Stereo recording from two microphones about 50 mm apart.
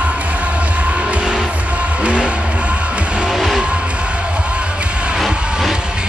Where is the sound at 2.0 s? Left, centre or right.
Right.